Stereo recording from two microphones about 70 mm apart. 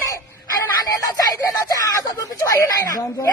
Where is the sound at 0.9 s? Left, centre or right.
Left.